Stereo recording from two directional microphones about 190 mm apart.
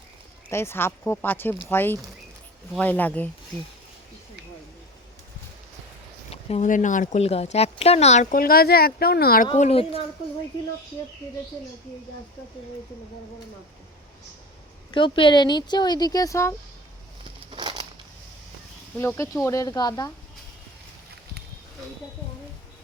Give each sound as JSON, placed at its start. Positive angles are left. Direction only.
{"t": 0.5, "sound": "speech", "side_deg": 10}
{"t": 6.3, "sound": "speech", "side_deg": 35}
{"t": 9.6, "sound": "speech", "side_deg": 30}
{"t": 14.9, "sound": "speech", "side_deg": 25}
{"t": 17.5, "sound": "crushing", "side_deg": -25}
{"t": 18.9, "sound": "speech", "side_deg": 15}